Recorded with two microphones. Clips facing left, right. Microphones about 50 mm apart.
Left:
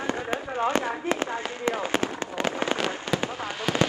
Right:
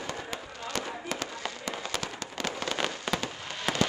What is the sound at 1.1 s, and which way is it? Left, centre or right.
Fireworks, left.